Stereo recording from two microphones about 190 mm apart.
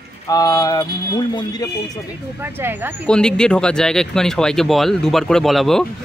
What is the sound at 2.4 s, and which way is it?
Speech, 10° right (ahead or behind).